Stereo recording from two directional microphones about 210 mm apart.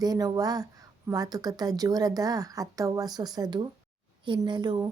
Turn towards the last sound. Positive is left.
turn(degrees=-20)  # may be behind; listen again after turning